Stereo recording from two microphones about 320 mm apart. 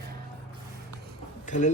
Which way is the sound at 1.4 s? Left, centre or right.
Left.